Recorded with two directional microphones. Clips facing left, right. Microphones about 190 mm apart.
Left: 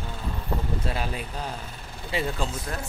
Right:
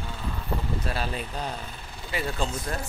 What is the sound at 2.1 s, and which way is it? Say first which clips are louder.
Speech: left 3 dB; 30° left (ahead or behind).